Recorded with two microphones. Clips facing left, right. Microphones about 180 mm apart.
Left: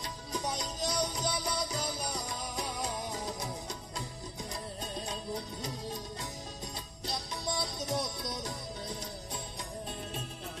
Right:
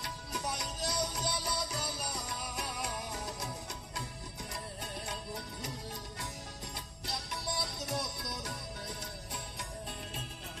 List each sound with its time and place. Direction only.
0.8 s music: 15° left (ahead or behind)
4.8 s music: 20° left (ahead or behind)
7.4 s music: 20° left (ahead or behind)